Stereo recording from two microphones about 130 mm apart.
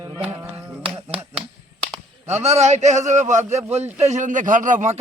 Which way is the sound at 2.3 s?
55° right (ahead or behind).